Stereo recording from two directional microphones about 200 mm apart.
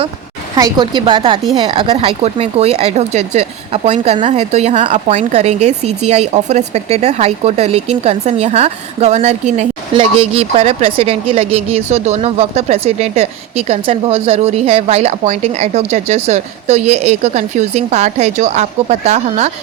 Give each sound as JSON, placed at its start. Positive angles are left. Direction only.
{"t": 0.5, "sound": "a woman's voice", "side_deg": -20}